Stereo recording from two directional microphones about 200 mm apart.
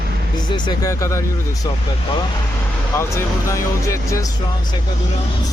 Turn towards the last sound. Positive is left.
turn(degrees=15)  # may be behind; listen again after turning